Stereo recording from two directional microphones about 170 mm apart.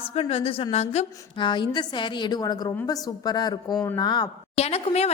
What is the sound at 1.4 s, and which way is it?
A woman's voice, 25° left (ahead or behind).